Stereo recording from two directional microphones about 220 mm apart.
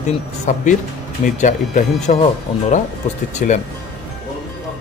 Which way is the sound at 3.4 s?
40° left (ahead or behind).